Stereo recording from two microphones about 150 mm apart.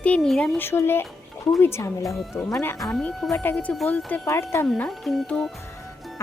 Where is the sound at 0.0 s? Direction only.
5° left (ahead or behind).